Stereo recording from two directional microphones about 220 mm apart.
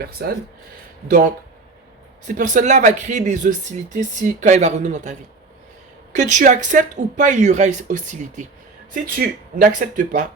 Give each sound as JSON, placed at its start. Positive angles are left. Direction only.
{"t": 0.0, "sound": "speech", "side_deg": -45}
{"t": 2.2, "sound": "speech", "side_deg": -35}
{"t": 6.1, "sound": "speech", "side_deg": -35}